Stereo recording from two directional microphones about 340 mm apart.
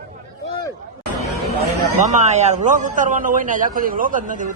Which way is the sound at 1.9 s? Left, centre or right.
Right.